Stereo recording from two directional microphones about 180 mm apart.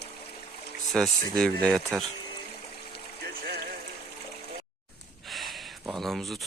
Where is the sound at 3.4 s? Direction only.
55° right (ahead or behind).